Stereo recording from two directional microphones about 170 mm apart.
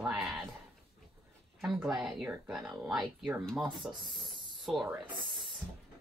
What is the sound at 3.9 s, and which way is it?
Speech, 30° right (ahead or behind).